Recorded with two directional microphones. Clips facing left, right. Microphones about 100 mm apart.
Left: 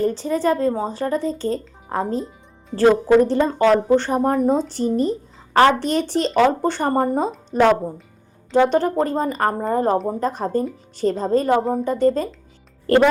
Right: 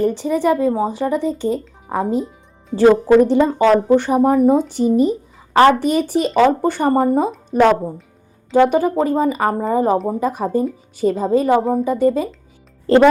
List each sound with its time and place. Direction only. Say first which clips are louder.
0.0 s speech: right 3 dB; 15° right (ahead or behind)
12.9 s speech: right 3 dB; 20° right (ahead or behind)